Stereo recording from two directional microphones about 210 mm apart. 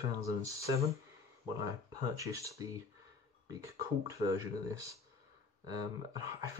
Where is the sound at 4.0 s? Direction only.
15° right (ahead or behind).